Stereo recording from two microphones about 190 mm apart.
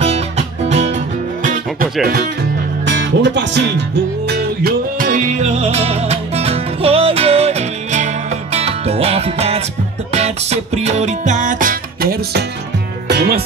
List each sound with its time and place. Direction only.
0.0 s music: 35° right (ahead or behind)
2.8 s speech: 70° right (ahead or behind)
4.3 s music: 55° right (ahead or behind)